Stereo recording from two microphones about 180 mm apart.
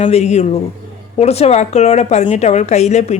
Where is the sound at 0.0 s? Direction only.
40° left (ahead or behind).